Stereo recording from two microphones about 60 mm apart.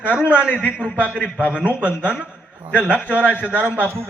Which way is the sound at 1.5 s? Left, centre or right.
Right.